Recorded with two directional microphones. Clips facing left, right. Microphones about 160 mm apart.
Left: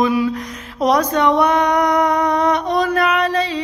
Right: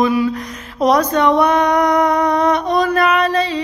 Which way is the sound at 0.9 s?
15° left (ahead or behind).